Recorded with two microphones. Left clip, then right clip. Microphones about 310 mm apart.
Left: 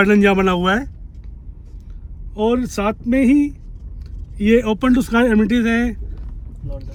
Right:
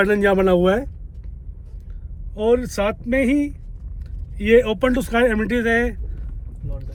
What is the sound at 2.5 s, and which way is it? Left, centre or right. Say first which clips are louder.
Speech: right 2 dB; centre.